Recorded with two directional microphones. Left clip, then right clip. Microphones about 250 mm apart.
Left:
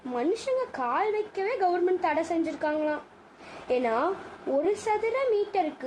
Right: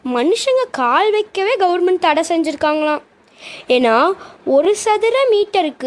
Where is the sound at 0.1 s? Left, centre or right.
Right.